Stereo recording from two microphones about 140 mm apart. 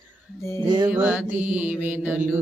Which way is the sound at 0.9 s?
10° right (ahead or behind).